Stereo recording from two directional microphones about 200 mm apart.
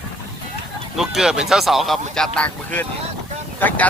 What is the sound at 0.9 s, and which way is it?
Speech, centre (ahead or behind).